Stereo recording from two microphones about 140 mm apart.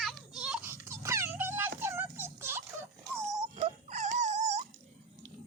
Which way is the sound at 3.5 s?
55° right (ahead or behind).